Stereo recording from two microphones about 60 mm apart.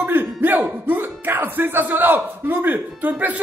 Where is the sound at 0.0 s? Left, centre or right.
Right.